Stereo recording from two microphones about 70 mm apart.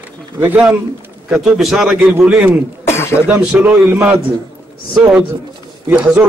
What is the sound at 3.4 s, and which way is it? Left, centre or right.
Speech, centre.